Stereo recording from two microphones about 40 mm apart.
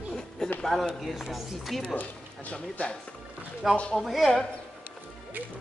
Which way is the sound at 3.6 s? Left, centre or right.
Centre.